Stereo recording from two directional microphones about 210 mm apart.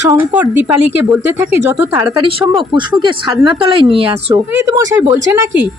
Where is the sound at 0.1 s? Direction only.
10° right (ahead or behind).